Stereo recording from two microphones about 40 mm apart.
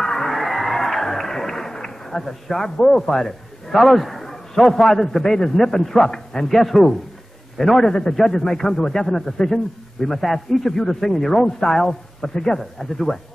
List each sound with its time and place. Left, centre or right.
0.0 s music: centre
6.0 s a man's voice: centre
6.5 s a man's voice: centre